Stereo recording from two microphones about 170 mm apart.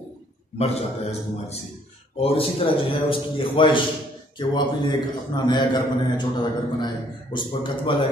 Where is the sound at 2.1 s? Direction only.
35° left (ahead or behind).